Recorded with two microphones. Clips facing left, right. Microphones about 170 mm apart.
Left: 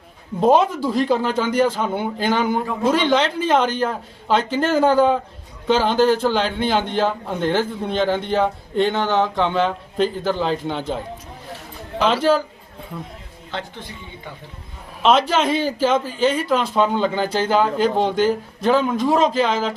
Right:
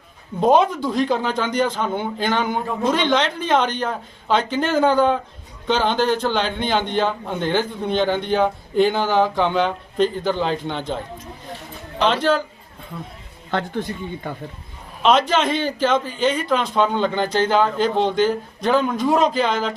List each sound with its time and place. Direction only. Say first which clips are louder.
0.3 s a man's voice: even; centre (ahead or behind)
13.5 s speech: right 7 dB; 50° right (ahead or behind)
15.0 s a man's voice: even; 5° left (ahead or behind)